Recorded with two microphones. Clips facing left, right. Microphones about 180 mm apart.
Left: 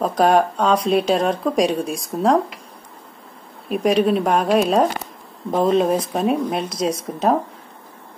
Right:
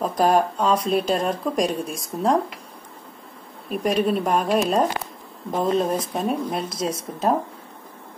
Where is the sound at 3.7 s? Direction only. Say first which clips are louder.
Left 4 dB; 5° left (ahead or behind).